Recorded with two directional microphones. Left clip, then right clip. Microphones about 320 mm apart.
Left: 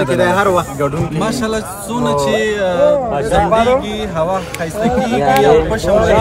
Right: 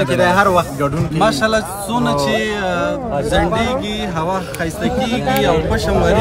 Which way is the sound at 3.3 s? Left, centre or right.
Left.